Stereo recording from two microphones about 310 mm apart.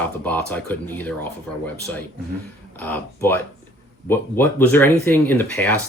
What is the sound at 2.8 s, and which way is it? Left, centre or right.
Speech, centre.